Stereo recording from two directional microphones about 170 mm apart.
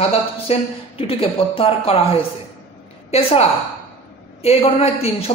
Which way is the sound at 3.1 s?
35° left (ahead or behind).